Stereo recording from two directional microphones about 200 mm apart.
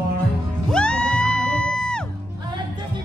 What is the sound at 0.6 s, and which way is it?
Music, 5° left (ahead or behind).